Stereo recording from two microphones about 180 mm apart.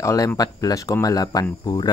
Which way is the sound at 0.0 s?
15° left (ahead or behind).